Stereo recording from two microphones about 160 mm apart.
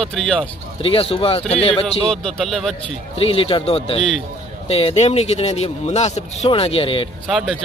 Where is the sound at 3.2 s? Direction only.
35° left (ahead or behind).